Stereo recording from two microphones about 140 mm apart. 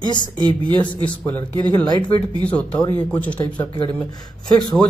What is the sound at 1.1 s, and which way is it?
Speech, 15° left (ahead or behind).